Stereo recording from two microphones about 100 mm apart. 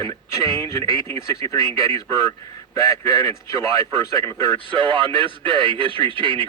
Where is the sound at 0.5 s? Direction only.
30° left (ahead or behind).